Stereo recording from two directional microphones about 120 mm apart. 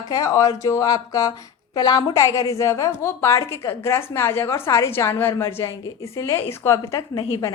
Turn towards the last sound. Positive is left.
turn(degrees=30)  # may be behind; listen again after turning